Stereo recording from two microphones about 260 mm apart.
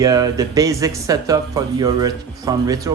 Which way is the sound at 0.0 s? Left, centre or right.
Centre.